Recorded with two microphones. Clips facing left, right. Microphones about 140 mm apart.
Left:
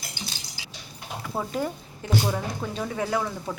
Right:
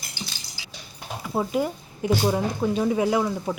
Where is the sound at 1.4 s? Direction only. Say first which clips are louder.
Right 5 dB; 10° right (ahead or behind).